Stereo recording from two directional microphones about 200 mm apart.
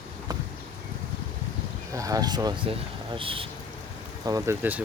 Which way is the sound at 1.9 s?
15° right (ahead or behind).